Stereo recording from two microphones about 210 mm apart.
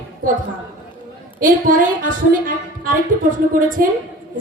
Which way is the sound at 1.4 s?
40° right (ahead or behind).